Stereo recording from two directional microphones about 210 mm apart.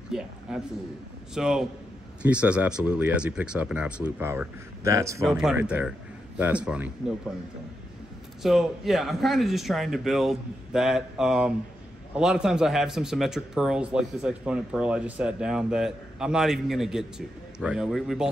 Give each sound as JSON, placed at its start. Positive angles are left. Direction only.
{"t": 0.1, "sound": "a sound", "side_deg": -5}
{"t": 1.3, "sound": "a man's voice", "side_deg": -5}
{"t": 5.2, "sound": "a man's voice", "side_deg": -5}
{"t": 8.4, "sound": "a man's voice", "side_deg": 0}